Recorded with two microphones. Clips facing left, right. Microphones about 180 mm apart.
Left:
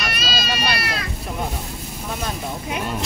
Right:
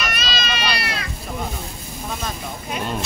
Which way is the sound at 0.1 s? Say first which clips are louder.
Left 1 dB; 35° left (ahead or behind).